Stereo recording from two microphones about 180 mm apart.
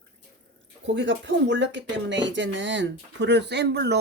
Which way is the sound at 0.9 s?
85° right.